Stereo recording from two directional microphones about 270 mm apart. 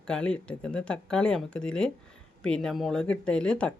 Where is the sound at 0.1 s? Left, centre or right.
Centre.